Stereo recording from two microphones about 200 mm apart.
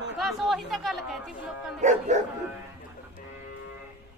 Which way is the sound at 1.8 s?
35° right (ahead or behind).